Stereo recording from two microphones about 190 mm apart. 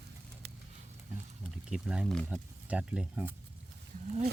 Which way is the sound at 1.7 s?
5° right (ahead or behind).